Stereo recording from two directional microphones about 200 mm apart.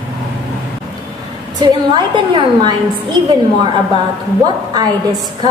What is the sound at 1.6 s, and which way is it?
A woman's voice, 20° right (ahead or behind).